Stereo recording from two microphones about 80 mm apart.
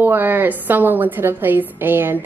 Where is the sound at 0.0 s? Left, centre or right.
Right.